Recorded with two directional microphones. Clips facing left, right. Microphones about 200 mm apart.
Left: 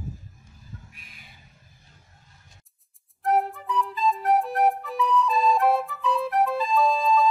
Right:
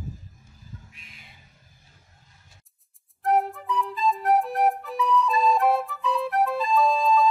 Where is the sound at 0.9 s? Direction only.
25° right (ahead or behind).